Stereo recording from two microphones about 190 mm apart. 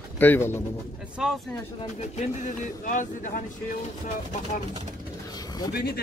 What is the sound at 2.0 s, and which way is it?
Speech, 40° left (ahead or behind).